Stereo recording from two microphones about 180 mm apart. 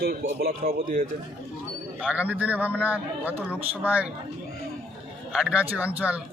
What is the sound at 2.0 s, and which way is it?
A man's voice, 5° right (ahead or behind).